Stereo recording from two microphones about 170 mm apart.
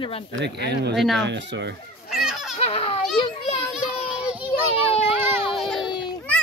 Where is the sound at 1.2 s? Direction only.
90° right.